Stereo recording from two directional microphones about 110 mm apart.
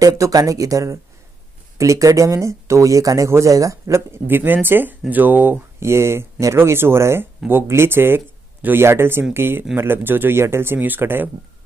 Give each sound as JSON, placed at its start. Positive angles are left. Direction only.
{"t": 0.0, "sound": "speech", "side_deg": -35}